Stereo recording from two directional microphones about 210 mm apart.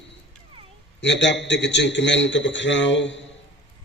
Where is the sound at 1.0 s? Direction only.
60° left (ahead or behind).